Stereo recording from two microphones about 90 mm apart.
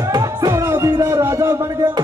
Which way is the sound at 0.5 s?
35° right (ahead or behind).